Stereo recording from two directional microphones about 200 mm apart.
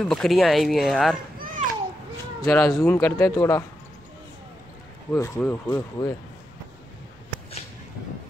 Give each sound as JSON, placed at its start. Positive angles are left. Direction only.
{"t": 0.0, "sound": "speech", "side_deg": 0}
{"t": 2.4, "sound": "speech", "side_deg": 15}
{"t": 5.1, "sound": "speech", "side_deg": 15}